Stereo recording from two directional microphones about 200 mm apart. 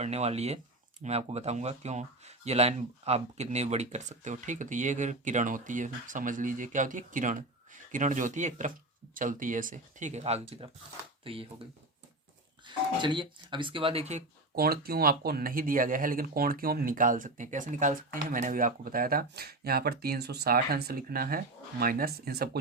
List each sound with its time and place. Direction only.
0.0 s speech: 30° right (ahead or behind)
12.6 s speech: 25° right (ahead or behind)
14.5 s speech: 50° right (ahead or behind)